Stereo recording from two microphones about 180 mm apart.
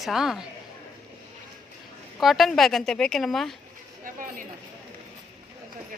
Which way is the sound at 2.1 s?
Centre (ahead or behind).